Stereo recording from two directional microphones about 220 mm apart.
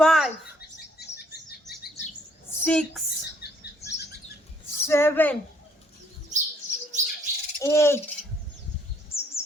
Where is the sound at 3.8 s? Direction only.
30° left (ahead or behind).